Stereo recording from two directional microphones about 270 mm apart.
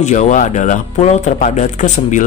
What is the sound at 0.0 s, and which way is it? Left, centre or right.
Speech, left.